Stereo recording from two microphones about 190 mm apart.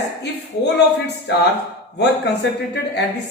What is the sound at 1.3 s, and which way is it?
Speech, 60° left (ahead or behind).